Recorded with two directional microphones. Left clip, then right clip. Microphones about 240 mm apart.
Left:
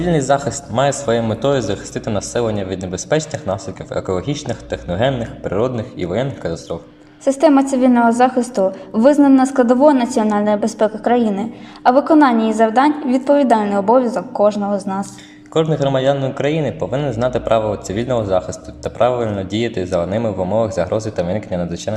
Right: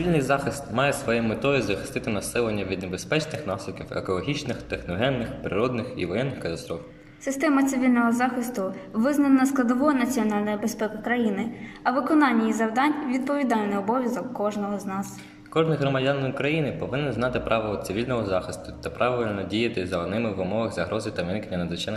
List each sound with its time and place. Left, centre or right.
0.3 s speech: centre
7.3 s a woman's voice: centre
15.5 s speech: centre